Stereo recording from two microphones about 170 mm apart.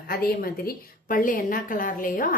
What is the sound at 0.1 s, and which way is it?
Speech, 60° left (ahead or behind).